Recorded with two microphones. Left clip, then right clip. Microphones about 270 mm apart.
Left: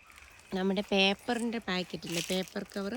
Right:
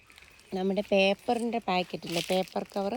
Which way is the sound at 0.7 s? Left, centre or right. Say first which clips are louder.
Right 5 dB; left.